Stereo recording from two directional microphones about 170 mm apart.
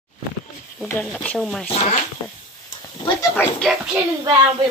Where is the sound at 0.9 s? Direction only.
10° left (ahead or behind).